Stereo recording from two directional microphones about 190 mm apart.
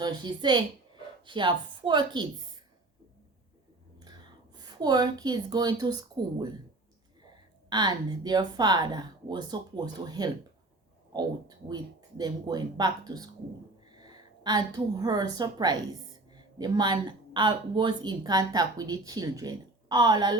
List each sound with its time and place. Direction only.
0.0 s speech: 25° right (ahead or behind)
4.0 s speech: 20° right (ahead or behind)
7.7 s a woman's voice: 20° right (ahead or behind)